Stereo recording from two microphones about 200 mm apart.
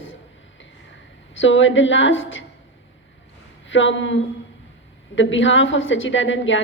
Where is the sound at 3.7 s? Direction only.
70° left (ahead or behind).